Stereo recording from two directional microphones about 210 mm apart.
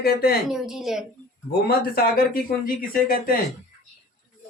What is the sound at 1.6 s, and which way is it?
A man's voice, 45° left (ahead or behind).